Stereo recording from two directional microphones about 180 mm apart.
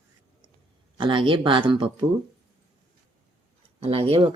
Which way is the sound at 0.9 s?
25° right (ahead or behind).